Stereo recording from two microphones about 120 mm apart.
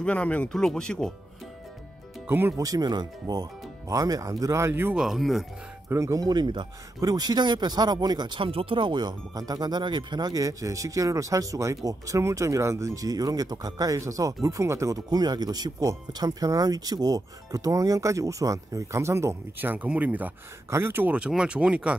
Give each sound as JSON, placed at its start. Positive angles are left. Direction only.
{"t": 0.0, "sound": "speech", "side_deg": 10}
{"t": 2.2, "sound": "speech", "side_deg": -20}
{"t": 2.6, "sound": "speech", "side_deg": -35}
{"t": 4.9, "sound": "speech", "side_deg": 0}
{"t": 5.9, "sound": "speech", "side_deg": -25}